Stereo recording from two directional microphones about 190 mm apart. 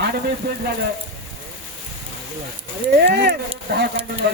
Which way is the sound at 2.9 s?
60° right (ahead or behind).